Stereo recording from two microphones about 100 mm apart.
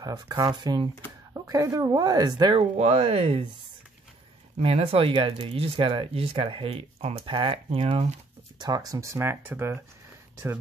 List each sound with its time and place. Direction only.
0.0 s speech: 40° right (ahead or behind)
1.3 s speech: 35° right (ahead or behind)
2.5 s speech: 90° right
4.6 s speech: 75° right (ahead or behind)
8.5 s speech: 40° right (ahead or behind); by 9.8 s 25° right (ahead or behind)